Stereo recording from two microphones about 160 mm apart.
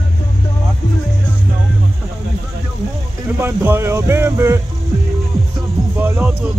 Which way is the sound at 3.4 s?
15° right (ahead or behind).